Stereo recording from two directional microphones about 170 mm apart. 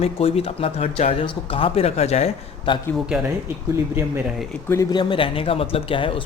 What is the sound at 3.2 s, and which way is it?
Speech, 15° right (ahead or behind).